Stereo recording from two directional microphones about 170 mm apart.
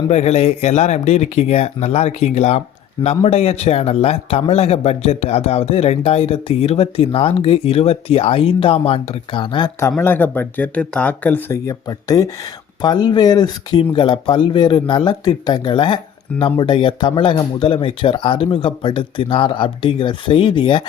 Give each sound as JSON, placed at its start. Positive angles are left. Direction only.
{"t": 0.1, "sound": "a man's voice", "side_deg": 40}
{"t": 10.0, "sound": "speech", "side_deg": 10}